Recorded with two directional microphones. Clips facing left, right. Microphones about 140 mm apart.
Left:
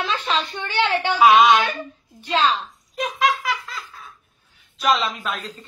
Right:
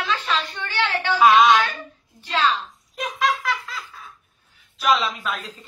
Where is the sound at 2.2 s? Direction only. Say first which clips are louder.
Left 2 dB; 20° left (ahead or behind).